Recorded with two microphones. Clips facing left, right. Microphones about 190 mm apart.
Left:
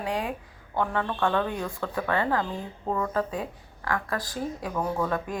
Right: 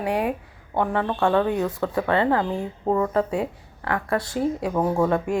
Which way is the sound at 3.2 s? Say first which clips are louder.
Right 7 dB; 70° right (ahead or behind).